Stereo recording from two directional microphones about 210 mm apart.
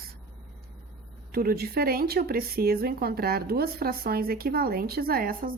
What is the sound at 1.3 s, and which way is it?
Speech, 45° right (ahead or behind).